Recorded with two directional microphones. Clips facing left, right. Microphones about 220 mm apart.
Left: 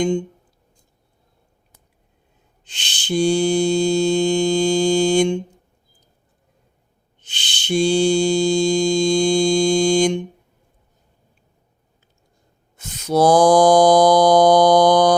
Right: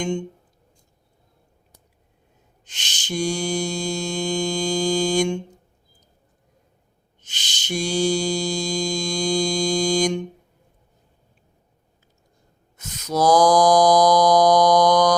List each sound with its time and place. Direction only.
2.6 s mantra: 30° left (ahead or behind)
7.2 s mantra: 30° left (ahead or behind)
12.7 s mantra: 30° left (ahead or behind)